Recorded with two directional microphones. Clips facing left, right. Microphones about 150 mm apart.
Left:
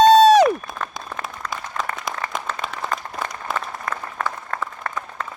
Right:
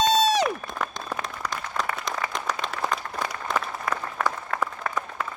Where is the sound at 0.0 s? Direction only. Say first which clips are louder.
Left 10 dB; 60° left (ahead or behind).